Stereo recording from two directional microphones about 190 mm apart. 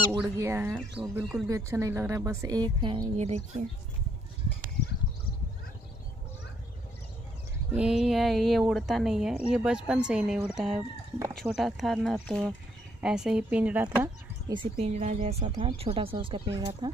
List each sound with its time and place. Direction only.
0.4 s a woman's voice: 15° right (ahead or behind); by 3.6 s 35° right (ahead or behind)
7.7 s speech: 5° right (ahead or behind)
10.8 s speech: 15° right (ahead or behind)
11.3 s speech: centre (ahead or behind)
14.5 s a woman's voice: 30° right (ahead or behind)